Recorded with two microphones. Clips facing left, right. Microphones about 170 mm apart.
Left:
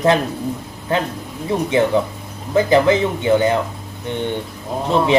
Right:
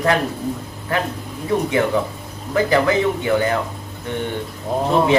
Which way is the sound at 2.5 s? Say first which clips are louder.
Left 3 dB; 20° left (ahead or behind).